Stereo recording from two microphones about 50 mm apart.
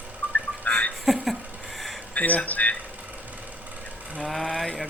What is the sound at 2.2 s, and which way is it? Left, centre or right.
Speech, left.